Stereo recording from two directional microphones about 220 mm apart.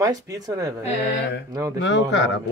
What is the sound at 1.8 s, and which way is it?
Speech, 55° left (ahead or behind).